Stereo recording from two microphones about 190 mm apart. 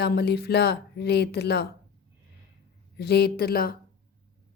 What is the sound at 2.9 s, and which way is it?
Speech, 55° left (ahead or behind).